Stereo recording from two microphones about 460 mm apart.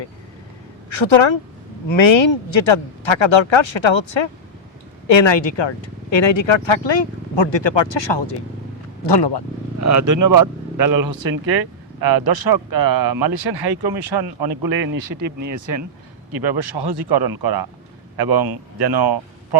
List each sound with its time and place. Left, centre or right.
0.9 s a woman's voice: left
9.8 s speech: right
16.3 s speech: right